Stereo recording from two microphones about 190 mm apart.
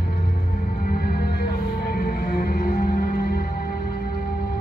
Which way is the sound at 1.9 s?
50° left (ahead or behind).